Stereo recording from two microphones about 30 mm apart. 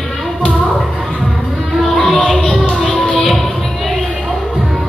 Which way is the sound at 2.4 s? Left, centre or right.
Left.